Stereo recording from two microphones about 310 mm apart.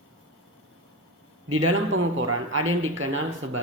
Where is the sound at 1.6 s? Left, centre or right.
Right.